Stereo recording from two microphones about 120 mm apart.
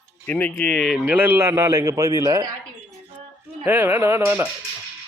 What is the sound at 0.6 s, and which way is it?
Speech, 5° left (ahead or behind).